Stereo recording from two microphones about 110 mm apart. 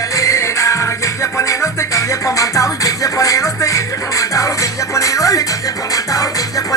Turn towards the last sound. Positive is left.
turn(degrees=30)  # may be behind; listen again after turning